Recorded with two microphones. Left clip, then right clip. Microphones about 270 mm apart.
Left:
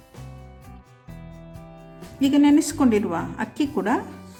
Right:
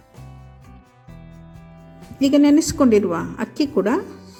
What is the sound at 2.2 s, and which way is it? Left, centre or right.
A woman's voice, centre.